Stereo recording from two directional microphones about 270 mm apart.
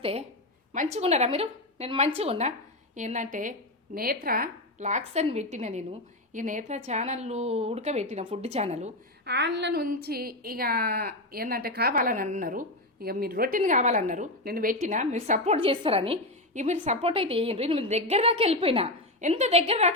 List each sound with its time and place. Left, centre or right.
0.0 s a woman's voice: right
9.2 s a woman's voice: right